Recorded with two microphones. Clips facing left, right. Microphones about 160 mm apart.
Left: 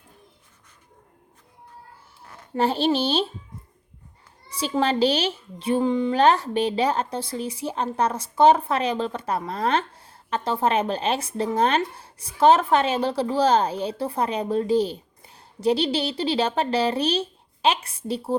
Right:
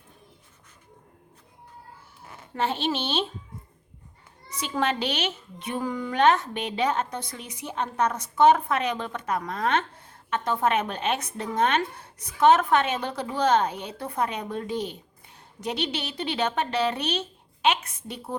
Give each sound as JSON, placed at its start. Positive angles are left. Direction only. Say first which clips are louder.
{"t": 2.6, "sound": "a child's voice", "louder": "left 6 dB", "side_deg": 35}
{"t": 4.4, "sound": "a child's voice", "louder": "left 4 dB", "side_deg": 30}